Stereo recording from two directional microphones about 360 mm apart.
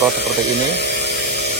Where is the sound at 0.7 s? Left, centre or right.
Left.